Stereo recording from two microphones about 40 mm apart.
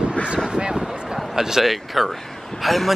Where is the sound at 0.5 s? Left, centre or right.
Right.